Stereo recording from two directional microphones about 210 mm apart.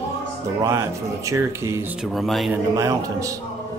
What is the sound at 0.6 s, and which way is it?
Speech, 15° right (ahead or behind).